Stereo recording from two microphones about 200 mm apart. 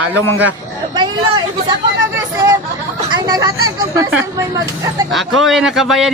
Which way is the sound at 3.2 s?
20° right (ahead or behind).